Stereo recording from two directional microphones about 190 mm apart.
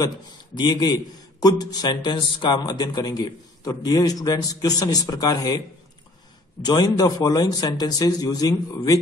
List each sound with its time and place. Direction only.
0.6 s a man's voice: 20° left (ahead or behind)
6.6 s a man's voice: 20° left (ahead or behind)